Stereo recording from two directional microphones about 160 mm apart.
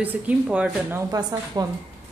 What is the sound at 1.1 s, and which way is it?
Speech, 20° right (ahead or behind).